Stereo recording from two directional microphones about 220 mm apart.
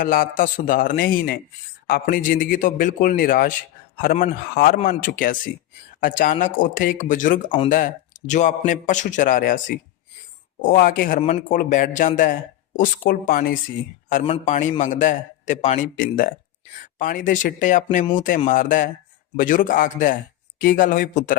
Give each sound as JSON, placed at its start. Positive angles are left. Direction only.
{"t": 0.0, "sound": "a man's voice", "side_deg": 40}